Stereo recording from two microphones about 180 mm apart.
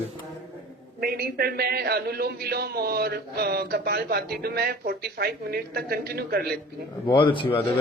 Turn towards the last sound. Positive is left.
turn(degrees=30)  # may be behind; listen again after turning